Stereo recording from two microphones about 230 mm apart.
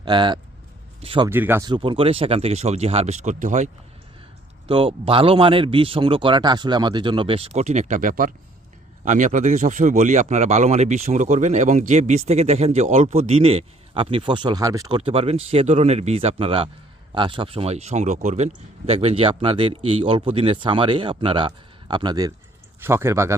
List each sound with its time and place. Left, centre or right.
0.0 s speech: centre
1.3 s speech: centre; by 3.7 s right
4.7 s speech: right